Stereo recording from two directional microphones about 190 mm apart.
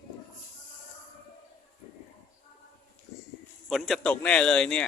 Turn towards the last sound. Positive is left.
turn(degrees=5)  # may be behind; listen again after turning